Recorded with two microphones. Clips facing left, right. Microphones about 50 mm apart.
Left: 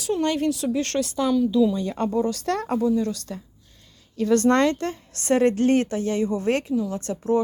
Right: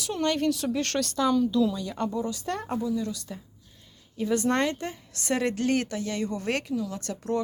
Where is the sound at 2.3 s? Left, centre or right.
Left.